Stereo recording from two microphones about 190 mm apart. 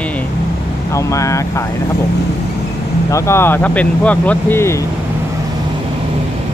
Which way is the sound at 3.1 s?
15° left (ahead or behind).